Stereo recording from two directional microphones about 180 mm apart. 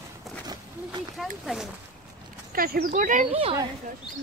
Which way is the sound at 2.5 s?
55° right (ahead or behind).